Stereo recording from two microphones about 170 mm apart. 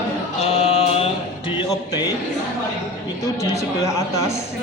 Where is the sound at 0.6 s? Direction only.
40° left (ahead or behind).